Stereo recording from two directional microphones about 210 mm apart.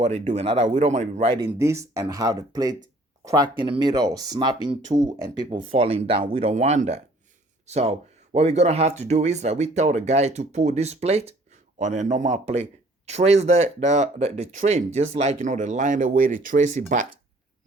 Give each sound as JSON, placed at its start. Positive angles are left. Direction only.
{"t": 0.0, "sound": "speech", "side_deg": -30}
{"t": 1.4, "sound": "speech", "side_deg": -15}